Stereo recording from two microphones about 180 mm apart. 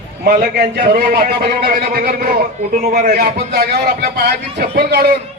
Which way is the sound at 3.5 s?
55° right (ahead or behind).